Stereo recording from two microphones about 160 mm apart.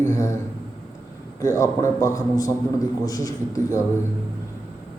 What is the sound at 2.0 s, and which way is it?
A man's voice, 20° left (ahead or behind).